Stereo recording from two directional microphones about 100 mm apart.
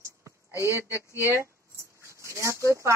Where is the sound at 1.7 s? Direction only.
30° right (ahead or behind).